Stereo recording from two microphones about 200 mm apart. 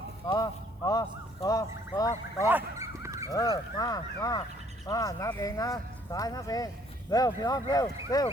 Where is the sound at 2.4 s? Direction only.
10° right (ahead or behind).